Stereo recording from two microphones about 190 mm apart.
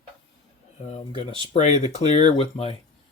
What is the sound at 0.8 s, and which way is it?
Speech, 35° left (ahead or behind).